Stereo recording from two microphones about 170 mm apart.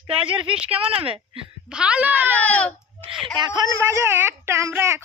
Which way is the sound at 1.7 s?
5° right (ahead or behind).